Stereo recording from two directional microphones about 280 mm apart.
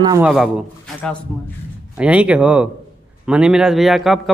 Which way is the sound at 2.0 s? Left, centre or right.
Centre.